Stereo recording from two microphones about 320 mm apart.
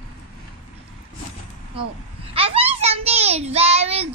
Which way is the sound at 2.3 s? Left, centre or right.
Centre.